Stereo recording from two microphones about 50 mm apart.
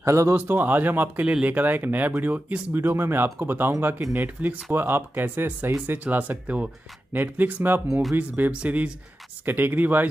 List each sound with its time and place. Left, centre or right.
0.0 s a man's voice: right
0.3 s speech: right
1.2 s speech: right
1.5 s speech: right
2.7 s speech: right
7.1 s speech: right
9.5 s speech: right